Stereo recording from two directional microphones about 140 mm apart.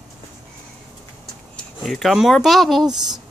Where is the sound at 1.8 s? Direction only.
Centre (ahead or behind).